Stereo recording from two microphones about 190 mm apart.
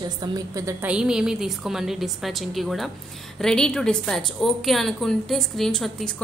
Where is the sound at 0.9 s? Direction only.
5° right (ahead or behind).